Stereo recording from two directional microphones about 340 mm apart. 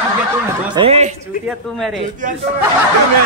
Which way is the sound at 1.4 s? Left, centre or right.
Centre.